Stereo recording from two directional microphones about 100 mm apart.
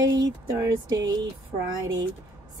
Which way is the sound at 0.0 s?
40° right (ahead or behind).